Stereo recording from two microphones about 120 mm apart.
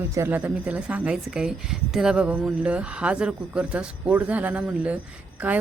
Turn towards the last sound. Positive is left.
turn(degrees=-15)  # may be behind; listen again after turning